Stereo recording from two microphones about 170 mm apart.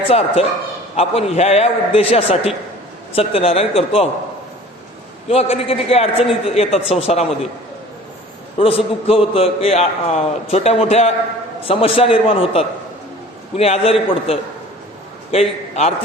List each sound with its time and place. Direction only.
0.1 s a man's voice: 35° left (ahead or behind)
5.3 s a man's voice: 35° left (ahead or behind)
8.5 s a man's voice: 35° left (ahead or behind)